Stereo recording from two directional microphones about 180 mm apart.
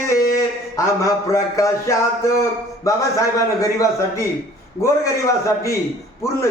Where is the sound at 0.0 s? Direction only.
15° left (ahead or behind).